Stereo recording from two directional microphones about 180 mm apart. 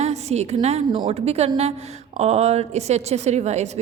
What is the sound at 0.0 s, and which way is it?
A woman's voice, 35° right (ahead or behind).